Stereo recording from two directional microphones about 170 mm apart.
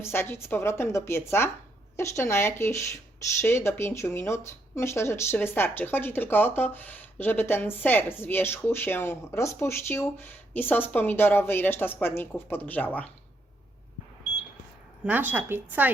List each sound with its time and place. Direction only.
0.0 s speech: 15° left (ahead or behind)
15.0 s speech: 10° right (ahead or behind)